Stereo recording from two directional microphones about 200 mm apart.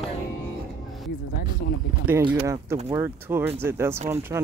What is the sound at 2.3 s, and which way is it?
Speech, 15° right (ahead or behind).